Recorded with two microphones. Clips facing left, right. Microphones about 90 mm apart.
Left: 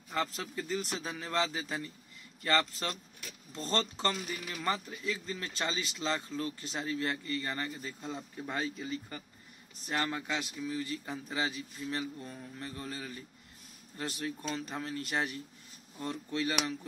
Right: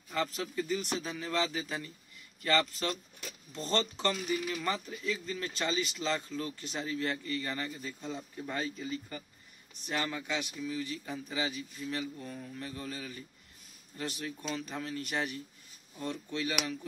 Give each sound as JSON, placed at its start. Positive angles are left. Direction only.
{"t": 0.6, "sound": "a man's voice", "side_deg": 30}